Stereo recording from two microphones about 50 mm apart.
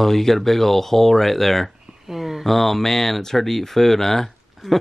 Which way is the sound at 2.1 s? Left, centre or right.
Centre.